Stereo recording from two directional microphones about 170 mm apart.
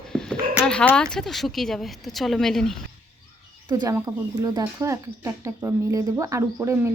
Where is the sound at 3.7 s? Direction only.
20° right (ahead or behind).